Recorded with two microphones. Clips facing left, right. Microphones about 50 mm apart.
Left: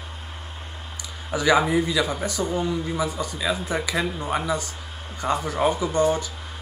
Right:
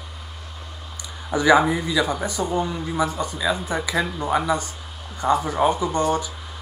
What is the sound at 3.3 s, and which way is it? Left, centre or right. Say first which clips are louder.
Speech: right 2 dB; centre.